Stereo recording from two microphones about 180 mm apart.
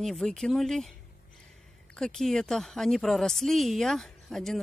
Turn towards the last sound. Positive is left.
turn(degrees=0)  # may be behind; listen again after turning